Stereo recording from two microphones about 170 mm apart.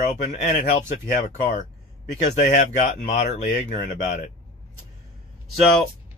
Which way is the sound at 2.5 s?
45° left (ahead or behind).